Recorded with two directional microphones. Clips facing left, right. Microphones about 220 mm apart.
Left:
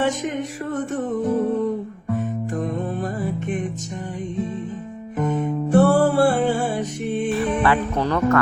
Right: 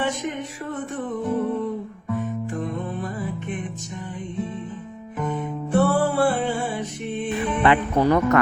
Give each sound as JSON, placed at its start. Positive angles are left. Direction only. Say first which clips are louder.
{"t": 0.0, "sound": "music", "louder": "left 4 dB", "side_deg": 45}
{"t": 5.1, "sound": "music", "louder": "left 5 dB", "side_deg": 45}
{"t": 7.3, "sound": "music", "louder": "right 1 dB", "side_deg": -15}